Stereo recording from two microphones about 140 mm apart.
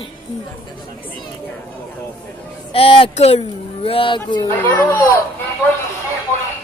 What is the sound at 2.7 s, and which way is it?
Speech, 40° left (ahead or behind).